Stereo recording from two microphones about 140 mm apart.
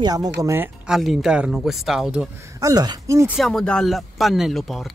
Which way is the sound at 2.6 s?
30° right (ahead or behind).